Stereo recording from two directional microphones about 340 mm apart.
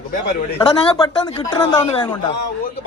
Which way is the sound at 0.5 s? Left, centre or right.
Centre.